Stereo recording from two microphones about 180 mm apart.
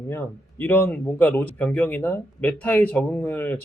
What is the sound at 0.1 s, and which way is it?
A man's voice, 10° left (ahead or behind).